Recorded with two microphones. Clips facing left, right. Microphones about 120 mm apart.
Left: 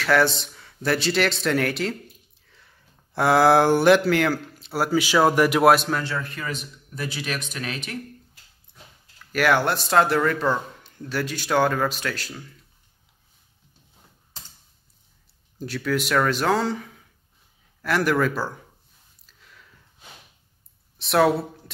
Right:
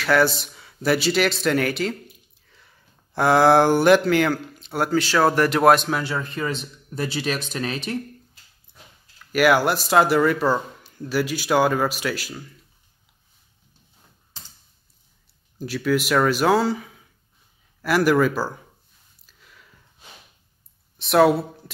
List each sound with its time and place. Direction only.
0.0 s speech: centre (ahead or behind)
6.1 s speech: 25° right (ahead or behind)
9.3 s speech: 5° right (ahead or behind)
15.6 s speech: 5° right (ahead or behind)
21.0 s speech: centre (ahead or behind)